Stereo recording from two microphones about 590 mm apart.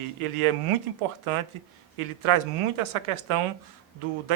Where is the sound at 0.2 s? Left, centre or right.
Right.